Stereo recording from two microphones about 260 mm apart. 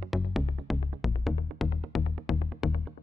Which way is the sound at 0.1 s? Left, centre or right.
Centre.